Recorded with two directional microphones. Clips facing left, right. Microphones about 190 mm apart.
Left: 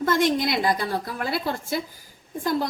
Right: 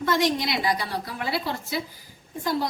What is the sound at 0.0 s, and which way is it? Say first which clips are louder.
A woman's voice: left 2 dB; 50° left (ahead or behind).